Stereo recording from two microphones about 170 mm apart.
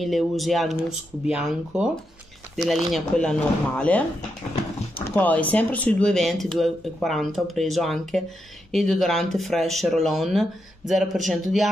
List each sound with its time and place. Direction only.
0.0 s speech: centre (ahead or behind)
5.1 s speech: 10° left (ahead or behind)